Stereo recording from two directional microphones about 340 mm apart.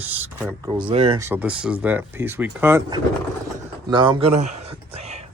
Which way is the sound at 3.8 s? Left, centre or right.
Centre.